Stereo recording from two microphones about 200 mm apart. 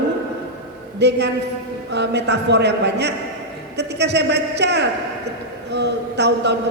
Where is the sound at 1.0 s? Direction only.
60° right (ahead or behind).